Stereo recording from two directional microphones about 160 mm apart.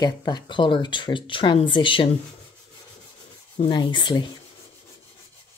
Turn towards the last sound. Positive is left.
turn(degrees=30)  # may be behind; listen again after turning